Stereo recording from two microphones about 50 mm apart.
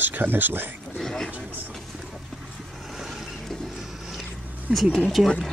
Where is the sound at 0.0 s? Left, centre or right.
Right.